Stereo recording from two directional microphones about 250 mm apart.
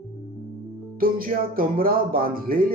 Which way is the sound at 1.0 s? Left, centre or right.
Right.